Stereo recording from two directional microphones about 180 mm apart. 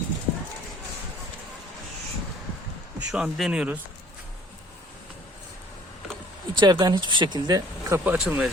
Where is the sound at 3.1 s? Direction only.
5° right (ahead or behind).